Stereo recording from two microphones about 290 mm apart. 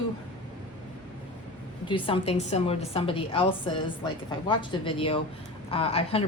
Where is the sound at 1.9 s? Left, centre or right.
Centre.